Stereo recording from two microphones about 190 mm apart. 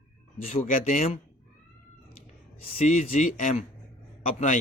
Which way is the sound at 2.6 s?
35° left (ahead or behind).